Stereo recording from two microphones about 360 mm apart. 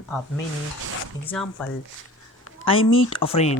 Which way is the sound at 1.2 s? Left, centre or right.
Centre.